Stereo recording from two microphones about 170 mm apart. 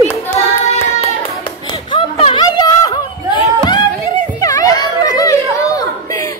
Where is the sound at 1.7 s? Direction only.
30° left (ahead or behind).